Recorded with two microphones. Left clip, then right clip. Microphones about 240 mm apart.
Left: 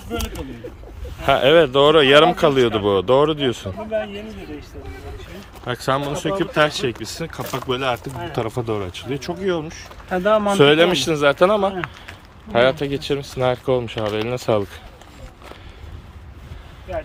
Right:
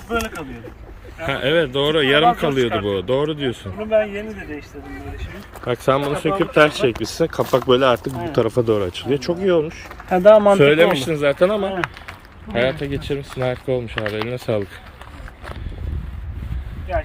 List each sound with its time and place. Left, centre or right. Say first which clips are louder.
1.2 s speech: left 5 dB; centre
5.6 s speech: right 3 dB; centre
10.1 s speech: right 7 dB; right
10.6 s speech: even; centre